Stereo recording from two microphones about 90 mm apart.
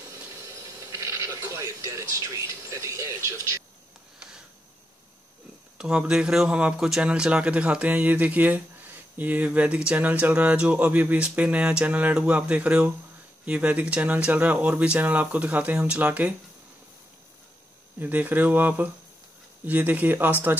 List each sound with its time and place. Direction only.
0.5 s television: 35° right (ahead or behind)
5.8 s speech: 10° right (ahead or behind)
17.9 s speech: 20° right (ahead or behind)